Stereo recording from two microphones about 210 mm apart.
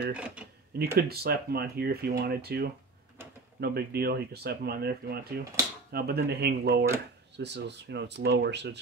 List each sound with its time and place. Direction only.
0.1 s speech: 5° right (ahead or behind)
0.7 s speech: 50° right (ahead or behind)